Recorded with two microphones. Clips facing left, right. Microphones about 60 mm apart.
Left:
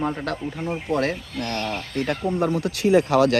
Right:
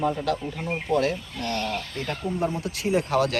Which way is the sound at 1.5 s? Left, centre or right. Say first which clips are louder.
Left 2 dB; left.